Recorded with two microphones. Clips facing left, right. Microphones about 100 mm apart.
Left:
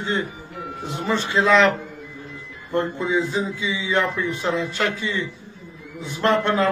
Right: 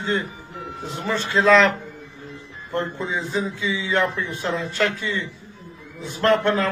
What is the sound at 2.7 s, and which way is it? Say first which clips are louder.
Speech: left 3 dB; 15° left (ahead or behind).